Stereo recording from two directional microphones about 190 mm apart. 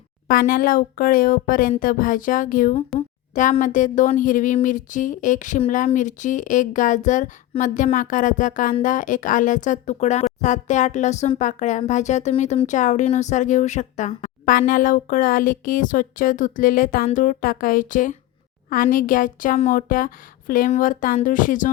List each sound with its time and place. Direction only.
0.3 s speech: 50° left (ahead or behind)